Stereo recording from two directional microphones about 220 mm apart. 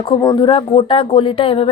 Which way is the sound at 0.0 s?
20° left (ahead or behind).